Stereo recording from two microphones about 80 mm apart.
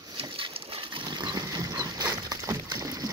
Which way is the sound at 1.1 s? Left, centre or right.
Right.